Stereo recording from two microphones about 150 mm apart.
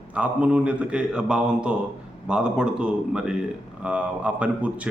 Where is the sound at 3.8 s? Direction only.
10° right (ahead or behind).